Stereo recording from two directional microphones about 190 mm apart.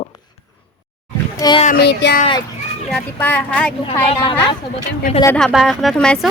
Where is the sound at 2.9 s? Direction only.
5° left (ahead or behind).